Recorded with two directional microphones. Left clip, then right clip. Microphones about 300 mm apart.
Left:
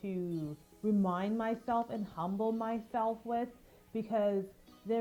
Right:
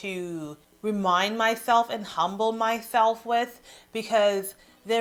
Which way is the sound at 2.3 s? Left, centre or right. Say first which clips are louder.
Right 9 dB; right.